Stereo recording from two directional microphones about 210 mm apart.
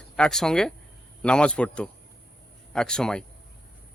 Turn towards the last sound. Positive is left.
turn(degrees=5)  # may be behind; listen again after turning